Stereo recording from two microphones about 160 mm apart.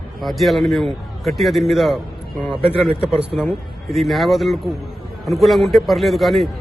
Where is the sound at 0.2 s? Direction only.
Centre (ahead or behind).